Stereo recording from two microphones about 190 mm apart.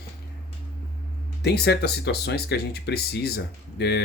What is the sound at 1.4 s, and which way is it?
Speech, 60° left (ahead or behind).